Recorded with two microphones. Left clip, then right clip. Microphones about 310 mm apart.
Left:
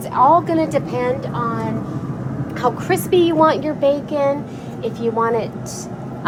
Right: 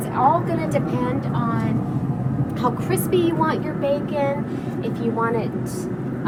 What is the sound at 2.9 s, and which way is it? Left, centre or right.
A woman's voice, left.